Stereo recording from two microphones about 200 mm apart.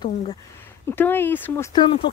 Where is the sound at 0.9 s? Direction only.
10° left (ahead or behind).